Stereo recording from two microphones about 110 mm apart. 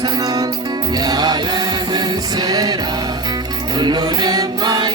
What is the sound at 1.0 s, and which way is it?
Music, 35° right (ahead or behind).